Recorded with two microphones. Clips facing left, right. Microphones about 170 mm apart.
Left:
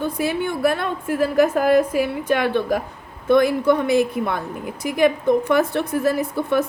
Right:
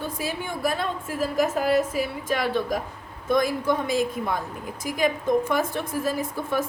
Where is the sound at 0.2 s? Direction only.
65° left (ahead or behind).